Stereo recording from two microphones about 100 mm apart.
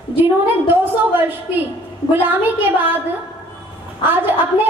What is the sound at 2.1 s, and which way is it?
Speech, 20° right (ahead or behind).